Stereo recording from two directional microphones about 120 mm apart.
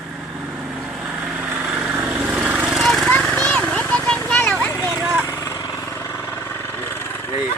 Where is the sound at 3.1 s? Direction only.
10° left (ahead or behind).